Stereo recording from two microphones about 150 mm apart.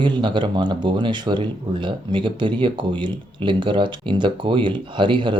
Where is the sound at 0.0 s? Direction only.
30° right (ahead or behind).